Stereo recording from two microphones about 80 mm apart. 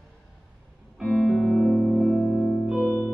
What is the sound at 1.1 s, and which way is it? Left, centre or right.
Music, centre.